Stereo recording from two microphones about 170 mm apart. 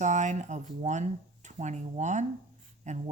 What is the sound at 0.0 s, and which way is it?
Speech, 45° right (ahead or behind).